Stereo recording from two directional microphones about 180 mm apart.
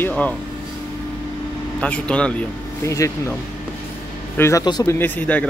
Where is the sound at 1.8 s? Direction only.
5° left (ahead or behind).